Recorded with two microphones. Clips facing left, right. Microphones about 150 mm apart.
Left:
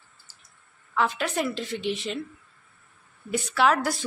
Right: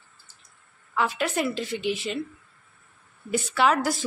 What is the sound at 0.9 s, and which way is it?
Speech, centre (ahead or behind).